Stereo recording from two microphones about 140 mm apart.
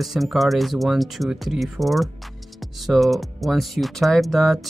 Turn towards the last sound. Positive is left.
turn(degrees=0)  # may be behind; listen again after turning